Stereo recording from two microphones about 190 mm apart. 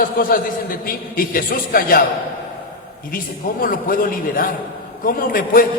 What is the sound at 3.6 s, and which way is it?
A man's voice, 50° left (ahead or behind).